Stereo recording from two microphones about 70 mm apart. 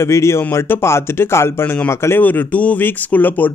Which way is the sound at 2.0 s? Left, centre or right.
Left.